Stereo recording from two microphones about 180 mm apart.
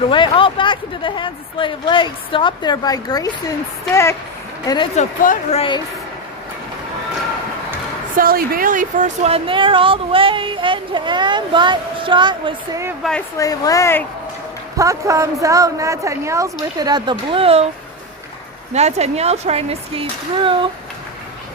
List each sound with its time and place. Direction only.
0.1 s speech: 30° left (ahead or behind)
4.6 s speech: 20° left (ahead or behind)
4.9 s speech: 45° left (ahead or behind)
5.5 s speech: 25° left (ahead or behind)
8.1 s a woman's voice: 55° right (ahead or behind); by 12.8 s 25° right (ahead or behind)
13.0 s speech: 5° left (ahead or behind)
13.4 s speech: 20° left (ahead or behind)
14.8 s a woman's voice: 20° right (ahead or behind)
18.7 s speech: 40° right (ahead or behind)